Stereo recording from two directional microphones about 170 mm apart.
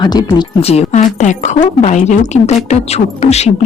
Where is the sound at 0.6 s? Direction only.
35° left (ahead or behind).